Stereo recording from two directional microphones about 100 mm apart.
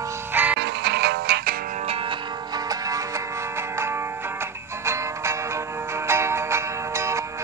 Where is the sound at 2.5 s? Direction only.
35° right (ahead or behind).